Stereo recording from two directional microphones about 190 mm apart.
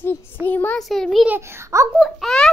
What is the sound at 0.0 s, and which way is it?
A child's voice, 10° left (ahead or behind).